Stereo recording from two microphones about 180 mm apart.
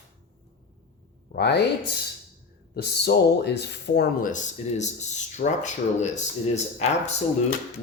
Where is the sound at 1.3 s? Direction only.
65° left (ahead or behind).